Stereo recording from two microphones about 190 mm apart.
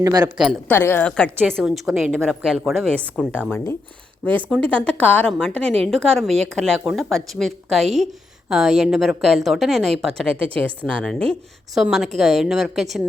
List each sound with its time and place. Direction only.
0.0 s speech: 20° right (ahead or behind)
0.3 s a woman's voice: centre (ahead or behind)
0.7 s a woman's voice: 10° left (ahead or behind)